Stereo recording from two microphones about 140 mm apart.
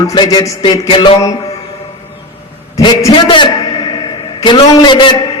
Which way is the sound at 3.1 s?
35° left (ahead or behind).